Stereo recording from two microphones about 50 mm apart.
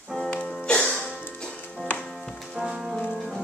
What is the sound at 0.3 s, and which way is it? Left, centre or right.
Music, left.